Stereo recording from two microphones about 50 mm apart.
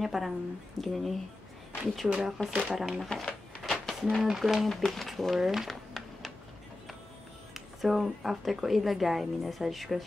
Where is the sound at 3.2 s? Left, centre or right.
Centre.